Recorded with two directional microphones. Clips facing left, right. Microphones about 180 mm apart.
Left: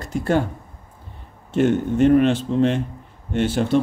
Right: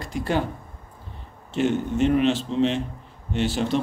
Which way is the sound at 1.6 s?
50° left (ahead or behind).